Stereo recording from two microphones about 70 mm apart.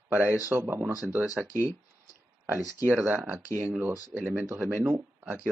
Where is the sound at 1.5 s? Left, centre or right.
Left.